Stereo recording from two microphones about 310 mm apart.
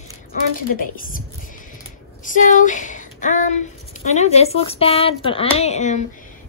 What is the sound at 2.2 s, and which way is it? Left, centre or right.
Speech, left.